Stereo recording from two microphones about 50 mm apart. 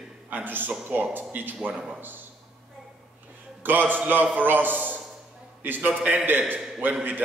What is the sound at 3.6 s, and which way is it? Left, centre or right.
A man's voice, right.